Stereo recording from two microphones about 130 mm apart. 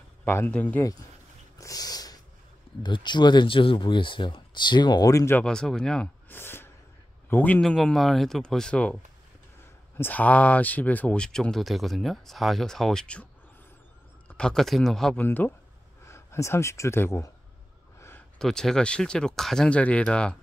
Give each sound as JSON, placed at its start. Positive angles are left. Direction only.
{"t": 0.2, "sound": "speech", "side_deg": 15}
{"t": 1.6, "sound": "snort", "side_deg": 30}
{"t": 2.8, "sound": "speech", "side_deg": 35}
{"t": 5.4, "sound": "speech", "side_deg": 5}
{"t": 6.2, "sound": "a sound", "side_deg": 15}
{"t": 7.2, "sound": "a man's voice", "side_deg": 15}
{"t": 7.6, "sound": "speech", "side_deg": 5}
{"t": 9.9, "sound": "speech", "side_deg": 15}
{"t": 14.3, "sound": "speech", "side_deg": 5}
{"t": 15.2, "sound": "speech", "side_deg": 15}
{"t": 18.4, "sound": "speech", "side_deg": 5}